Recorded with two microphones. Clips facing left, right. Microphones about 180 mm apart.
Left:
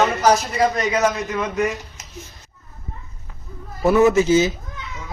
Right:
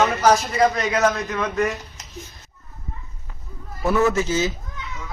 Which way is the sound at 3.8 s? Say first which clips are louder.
Left 5 dB; 20° left (ahead or behind).